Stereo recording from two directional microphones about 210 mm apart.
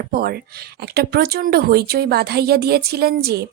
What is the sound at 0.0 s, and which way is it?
Speech, 45° right (ahead or behind).